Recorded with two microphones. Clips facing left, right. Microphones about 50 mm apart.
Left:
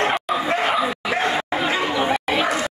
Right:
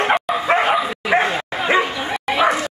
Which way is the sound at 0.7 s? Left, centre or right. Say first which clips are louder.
Right 2 dB; centre.